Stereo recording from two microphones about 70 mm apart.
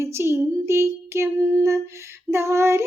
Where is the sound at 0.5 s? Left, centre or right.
Right.